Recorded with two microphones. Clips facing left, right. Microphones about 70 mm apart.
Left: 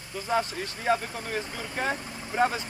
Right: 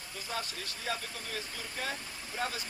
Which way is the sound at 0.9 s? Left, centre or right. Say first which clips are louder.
Left 11 dB; left.